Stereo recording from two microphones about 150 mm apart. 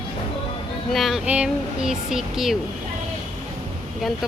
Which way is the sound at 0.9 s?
Centre (ahead or behind).